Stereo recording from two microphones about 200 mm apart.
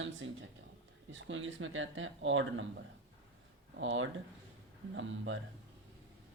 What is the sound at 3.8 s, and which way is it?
Speech, 70° right (ahead or behind).